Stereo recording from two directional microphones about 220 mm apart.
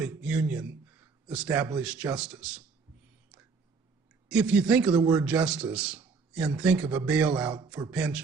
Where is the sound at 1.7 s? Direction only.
5° right (ahead or behind).